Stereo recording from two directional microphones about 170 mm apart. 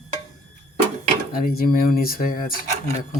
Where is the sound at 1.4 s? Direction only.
60° left (ahead or behind).